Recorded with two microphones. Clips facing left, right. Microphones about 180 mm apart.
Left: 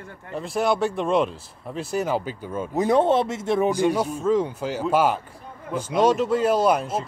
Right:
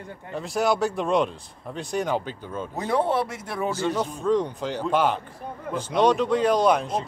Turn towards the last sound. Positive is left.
turn(degrees=5)  # may be behind; listen again after turning